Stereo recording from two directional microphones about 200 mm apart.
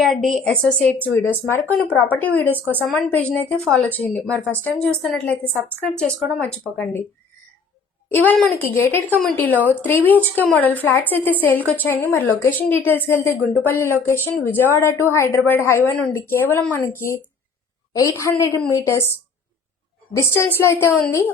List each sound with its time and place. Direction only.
0.0 s a woman's voice: centre (ahead or behind)
8.1 s a woman's voice: 5° left (ahead or behind)
20.1 s a woman's voice: 15° left (ahead or behind)